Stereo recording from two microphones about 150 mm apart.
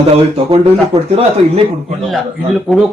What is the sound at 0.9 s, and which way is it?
Speech, 20° right (ahead or behind).